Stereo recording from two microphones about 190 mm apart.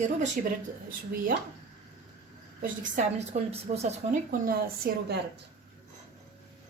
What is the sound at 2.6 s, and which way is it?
A woman's voice, 40° right (ahead or behind).